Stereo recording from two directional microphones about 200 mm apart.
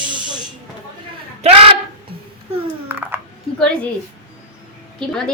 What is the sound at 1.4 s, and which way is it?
Music, 30° right (ahead or behind).